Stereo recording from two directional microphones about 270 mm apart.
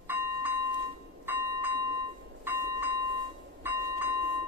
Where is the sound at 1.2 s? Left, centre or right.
Centre.